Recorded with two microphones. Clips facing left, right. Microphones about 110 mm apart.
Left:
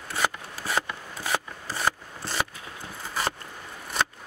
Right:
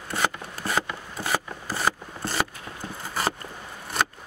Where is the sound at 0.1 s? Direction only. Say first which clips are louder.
Right 1 dB; centre (ahead or behind).